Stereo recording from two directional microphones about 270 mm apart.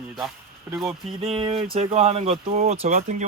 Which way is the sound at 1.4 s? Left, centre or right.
Centre.